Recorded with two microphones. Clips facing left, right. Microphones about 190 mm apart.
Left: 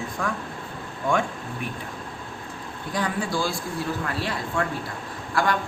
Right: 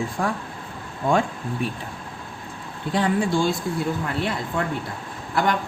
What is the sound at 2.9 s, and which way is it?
Speech, 25° right (ahead or behind).